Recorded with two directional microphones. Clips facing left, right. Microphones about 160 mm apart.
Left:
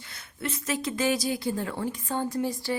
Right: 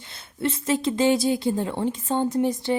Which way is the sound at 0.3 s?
30° right (ahead or behind).